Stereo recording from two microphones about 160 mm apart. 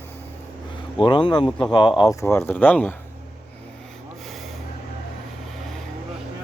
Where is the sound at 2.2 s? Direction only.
15° left (ahead or behind).